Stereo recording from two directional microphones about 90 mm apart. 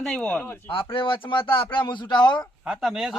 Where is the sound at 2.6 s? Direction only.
5° right (ahead or behind).